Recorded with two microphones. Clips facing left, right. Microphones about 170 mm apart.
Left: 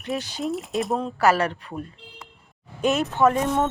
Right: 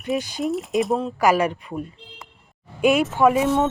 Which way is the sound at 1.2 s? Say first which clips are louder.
Right 1 dB; 10° right (ahead or behind).